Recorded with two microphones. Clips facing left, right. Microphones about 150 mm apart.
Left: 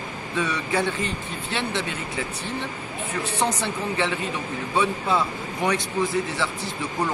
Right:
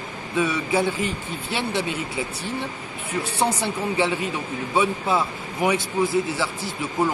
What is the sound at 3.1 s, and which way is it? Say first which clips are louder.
Speech: right 2 dB; 10° right (ahead or behind).